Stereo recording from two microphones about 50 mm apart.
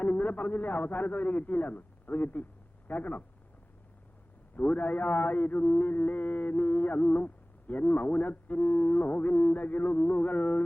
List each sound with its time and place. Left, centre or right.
0.0 s a man's voice: left
4.5 s speech: left